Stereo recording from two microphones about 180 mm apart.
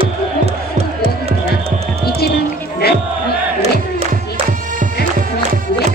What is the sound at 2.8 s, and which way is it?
Battle cry, 60° left (ahead or behind).